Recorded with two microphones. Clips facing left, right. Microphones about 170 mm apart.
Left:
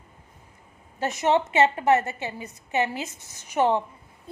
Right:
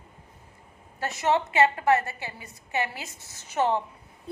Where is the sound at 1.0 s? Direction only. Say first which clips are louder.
Left 3 dB; 20° left (ahead or behind).